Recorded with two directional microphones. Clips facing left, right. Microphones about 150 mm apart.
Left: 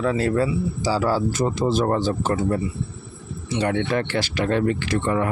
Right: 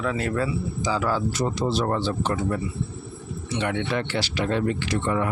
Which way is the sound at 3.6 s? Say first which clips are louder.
Left 4 dB; 45° left (ahead or behind).